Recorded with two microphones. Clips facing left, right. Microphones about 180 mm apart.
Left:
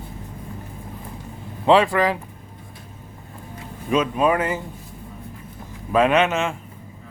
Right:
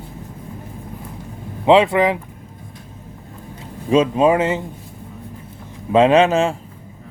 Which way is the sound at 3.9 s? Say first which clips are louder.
Right 5 dB; 25° right (ahead or behind).